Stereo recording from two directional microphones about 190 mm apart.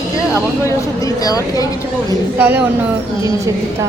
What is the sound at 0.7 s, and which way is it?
Speech, 20° left (ahead or behind).